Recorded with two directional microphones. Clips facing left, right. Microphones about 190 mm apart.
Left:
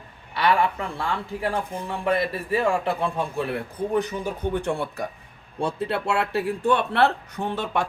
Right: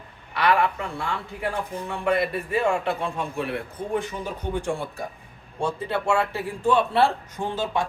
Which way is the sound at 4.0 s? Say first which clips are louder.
Left 4 dB; 55° left (ahead or behind).